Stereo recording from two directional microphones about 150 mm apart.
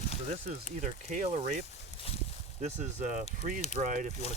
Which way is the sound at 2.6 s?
50° right (ahead or behind).